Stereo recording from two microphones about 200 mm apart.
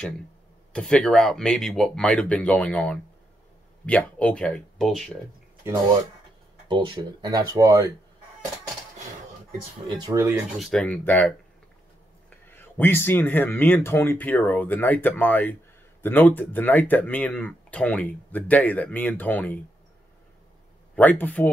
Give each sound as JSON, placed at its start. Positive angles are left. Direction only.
{"t": 0.7, "sound": "speech", "side_deg": 5}
{"t": 6.7, "sound": "speech", "side_deg": -25}
{"t": 9.8, "sound": "speech", "side_deg": -20}
{"t": 10.6, "sound": "speech", "side_deg": 5}
{"t": 12.4, "sound": "speech", "side_deg": 10}
{"t": 20.9, "sound": "speech", "side_deg": 10}